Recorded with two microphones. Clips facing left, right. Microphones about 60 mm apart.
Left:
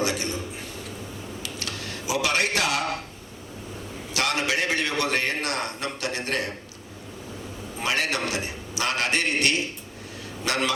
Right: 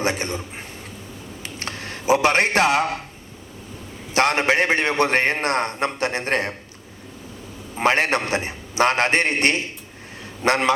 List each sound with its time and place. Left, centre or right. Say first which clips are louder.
0.0 s a man's voice: right 3 dB; right
1.4 s a sound: right 4 dB; right
4.1 s a man's voice: right 7 dB; right
7.8 s a man's voice: right 7 dB; right